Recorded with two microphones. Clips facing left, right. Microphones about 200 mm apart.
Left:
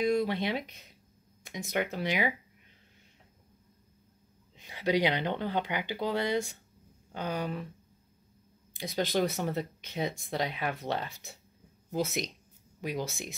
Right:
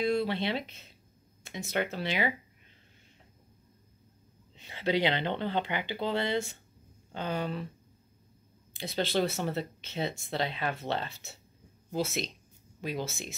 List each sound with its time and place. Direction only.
0.0 s speech: 15° left (ahead or behind)
4.6 s speech: 10° left (ahead or behind)
8.7 s speech: 15° left (ahead or behind)
12.8 s speech: 15° left (ahead or behind)